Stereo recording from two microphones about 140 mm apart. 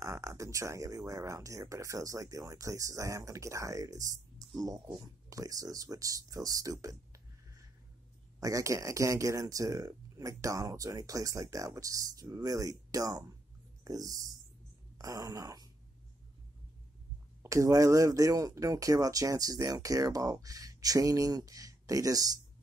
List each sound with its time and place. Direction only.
0.0 s speech: 20° right (ahead or behind)
15.0 s a sound: 25° right (ahead or behind)
17.4 s speech: 20° right (ahead or behind)